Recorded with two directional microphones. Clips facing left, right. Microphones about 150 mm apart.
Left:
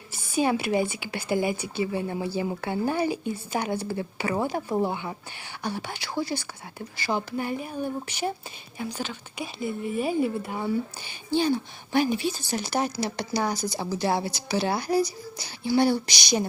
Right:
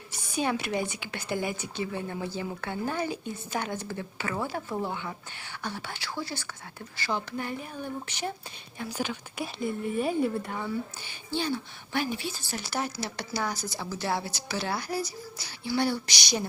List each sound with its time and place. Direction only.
0.1 s a sound: 5° left (ahead or behind)
0.8 s speech: 5° left (ahead or behind)
8.9 s speech: 10° right (ahead or behind); by 16.5 s 15° left (ahead or behind)